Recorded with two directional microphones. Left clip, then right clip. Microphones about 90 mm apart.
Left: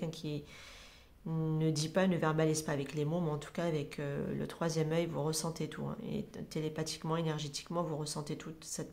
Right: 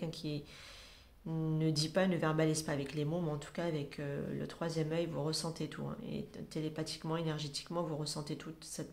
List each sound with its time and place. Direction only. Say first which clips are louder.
0.0 s speech: left 1 dB; 20° left (ahead or behind)